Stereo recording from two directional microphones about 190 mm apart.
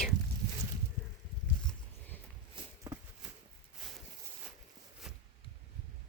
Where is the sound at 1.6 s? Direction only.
10° left (ahead or behind).